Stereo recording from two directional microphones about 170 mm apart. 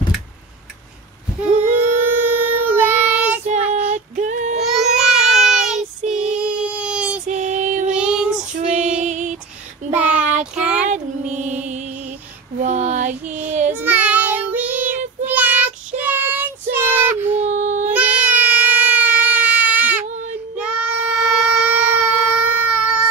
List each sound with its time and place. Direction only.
1.4 s child singing: 10° right (ahead or behind)
3.7 s female singing: 45° right (ahead or behind)
4.9 s child singing: 5° right (ahead or behind)
7.2 s child singing: 45° right (ahead or behind)
7.9 s child singing: 5° right (ahead or behind)
8.5 s female singing: 45° right (ahead or behind)
9.9 s child singing: 10° right (ahead or behind)
12.6 s child singing: 45° right (ahead or behind)
13.8 s child singing: 10° right (ahead or behind)
17.4 s baby cry: 45° right (ahead or behind)
17.8 s baby cry: 10° right (ahead or behind)
20.5 s child singing: 5° right (ahead or behind)